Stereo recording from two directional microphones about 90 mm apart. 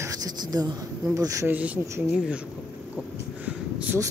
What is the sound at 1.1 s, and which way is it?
Speech, 40° right (ahead or behind).